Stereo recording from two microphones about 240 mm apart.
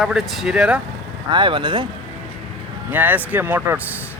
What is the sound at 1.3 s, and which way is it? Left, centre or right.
Speech, centre.